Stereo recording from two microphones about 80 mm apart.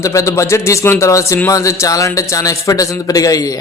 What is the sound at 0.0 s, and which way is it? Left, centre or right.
A man's voice, left.